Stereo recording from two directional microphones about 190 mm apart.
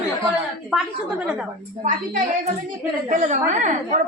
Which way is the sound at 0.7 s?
Centre (ahead or behind).